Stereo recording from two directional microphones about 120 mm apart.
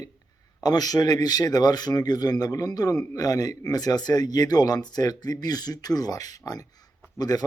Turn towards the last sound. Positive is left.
turn(degrees=30)  # may be behind; listen again after turning